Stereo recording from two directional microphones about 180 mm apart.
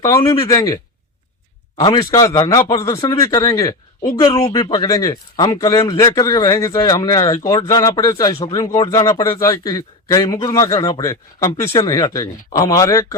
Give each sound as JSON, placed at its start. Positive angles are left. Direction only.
{"t": 0.3, "sound": "speech", "side_deg": 20}
{"t": 1.8, "sound": "speech", "side_deg": 25}